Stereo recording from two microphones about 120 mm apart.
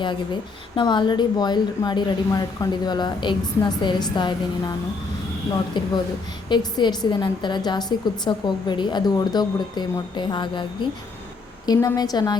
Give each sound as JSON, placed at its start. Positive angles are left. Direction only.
{"t": 0.8, "sound": "a woman's voice", "side_deg": 40}
{"t": 5.7, "sound": "a woman's voice", "side_deg": 40}